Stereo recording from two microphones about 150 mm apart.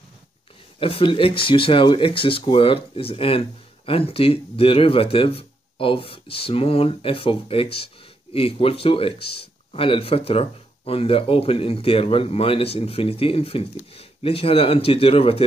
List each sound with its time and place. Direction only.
0.7 s speech: 35° left (ahead or behind)